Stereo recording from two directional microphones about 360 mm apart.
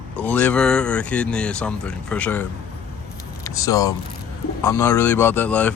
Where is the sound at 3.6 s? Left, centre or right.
Centre.